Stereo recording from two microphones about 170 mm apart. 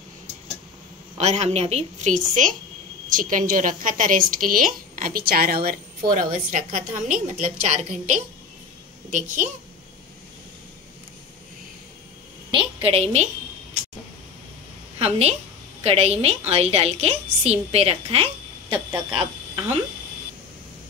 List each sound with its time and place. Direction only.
1.1 s a woman's voice: 40° right (ahead or behind); by 5.8 s 65° right (ahead or behind)
6.1 s a woman's voice: 55° right (ahead or behind)
12.4 s a woman's voice: 30° right (ahead or behind)
15.0 s a woman's voice: 40° right (ahead or behind)